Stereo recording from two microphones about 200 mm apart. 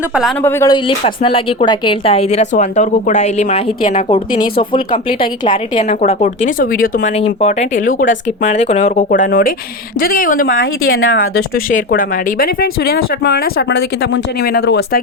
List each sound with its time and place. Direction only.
0.1 s speech: centre (ahead or behind)
0.4 s speech: 15° left (ahead or behind)
0.9 s speech: 25° left (ahead or behind)
4.1 s speech: 25° left (ahead or behind)
5.5 s speech: 40° left (ahead or behind)
7.2 s speech: 30° left (ahead or behind)
10.4 s a woman's voice: 80° left
11.2 s speech: 45° left (ahead or behind)